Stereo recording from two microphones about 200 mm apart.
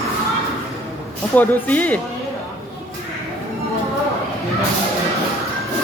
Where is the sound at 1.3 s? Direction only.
10° left (ahead or behind).